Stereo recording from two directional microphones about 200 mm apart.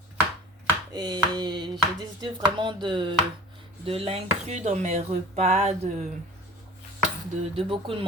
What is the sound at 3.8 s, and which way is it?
Dishes, 30° right (ahead or behind).